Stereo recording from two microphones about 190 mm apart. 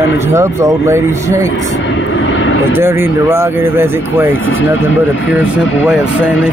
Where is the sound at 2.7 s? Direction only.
10° right (ahead or behind).